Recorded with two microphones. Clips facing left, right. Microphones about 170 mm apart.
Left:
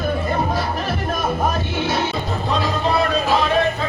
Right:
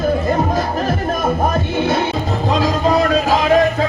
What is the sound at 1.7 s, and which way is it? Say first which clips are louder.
Music: right 4 dB; 50° right (ahead or behind).